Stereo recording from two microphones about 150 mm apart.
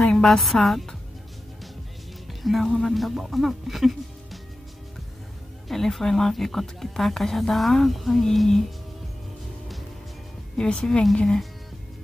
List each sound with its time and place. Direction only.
0.0 s a woman's voice: 5° left (ahead or behind)
2.4 s speech: centre (ahead or behind)
5.7 s speech: centre (ahead or behind)
10.6 s speech: 5° left (ahead or behind)